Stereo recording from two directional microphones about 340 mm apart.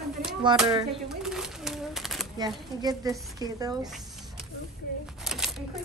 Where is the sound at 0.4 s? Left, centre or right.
Centre.